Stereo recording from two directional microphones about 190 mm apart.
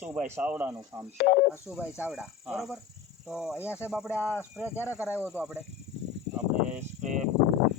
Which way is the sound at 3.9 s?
Centre (ahead or behind).